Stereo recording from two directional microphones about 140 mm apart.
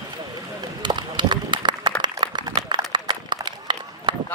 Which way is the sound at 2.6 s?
30° right (ahead or behind).